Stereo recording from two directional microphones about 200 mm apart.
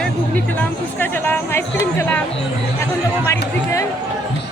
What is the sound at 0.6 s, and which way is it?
Speech, 10° left (ahead or behind).